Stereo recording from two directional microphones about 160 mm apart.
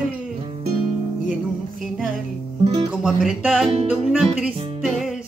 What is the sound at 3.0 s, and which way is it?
Music, centre (ahead or behind).